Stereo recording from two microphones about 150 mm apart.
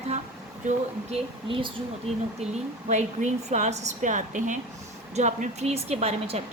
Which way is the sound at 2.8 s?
55° right (ahead or behind).